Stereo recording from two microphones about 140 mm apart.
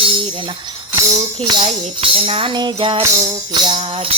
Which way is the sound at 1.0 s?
30° right (ahead or behind).